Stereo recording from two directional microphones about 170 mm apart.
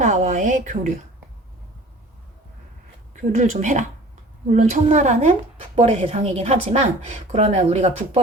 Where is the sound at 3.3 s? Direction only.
45° right (ahead or behind).